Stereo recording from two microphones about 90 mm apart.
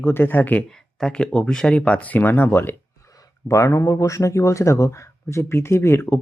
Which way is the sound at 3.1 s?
40° left (ahead or behind).